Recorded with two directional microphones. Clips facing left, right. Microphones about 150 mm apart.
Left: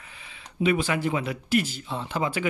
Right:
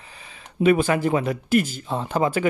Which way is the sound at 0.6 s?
50° right (ahead or behind).